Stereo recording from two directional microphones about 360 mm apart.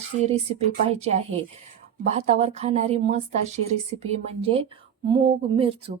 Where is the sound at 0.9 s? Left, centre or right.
Centre.